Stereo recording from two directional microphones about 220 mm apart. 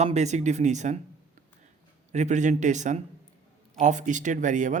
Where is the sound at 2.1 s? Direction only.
30° right (ahead or behind).